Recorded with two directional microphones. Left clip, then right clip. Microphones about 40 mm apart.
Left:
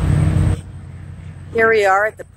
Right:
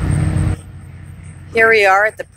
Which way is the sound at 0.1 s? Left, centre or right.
Right.